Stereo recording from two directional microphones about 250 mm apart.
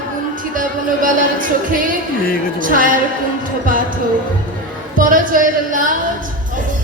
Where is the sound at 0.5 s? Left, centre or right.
Right.